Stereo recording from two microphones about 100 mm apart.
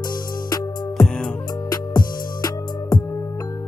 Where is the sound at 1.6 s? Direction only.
40° left (ahead or behind).